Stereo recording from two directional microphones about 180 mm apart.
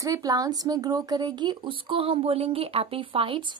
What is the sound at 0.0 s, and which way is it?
Speech, 20° right (ahead or behind).